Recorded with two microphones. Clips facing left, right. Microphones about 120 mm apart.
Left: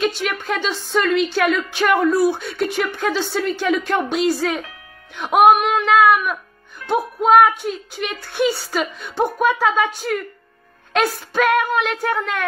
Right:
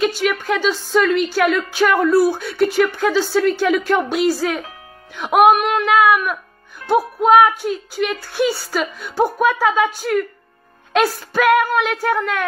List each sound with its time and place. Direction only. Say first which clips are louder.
0.0 s a woman's voice: right 3 dB; centre (ahead or behind)
6.8 s music: right 4 dB; 35° right (ahead or behind)
7.2 s a woman's voice: even; centre (ahead or behind)